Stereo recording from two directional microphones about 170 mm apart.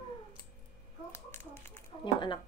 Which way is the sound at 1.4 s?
15° left (ahead or behind).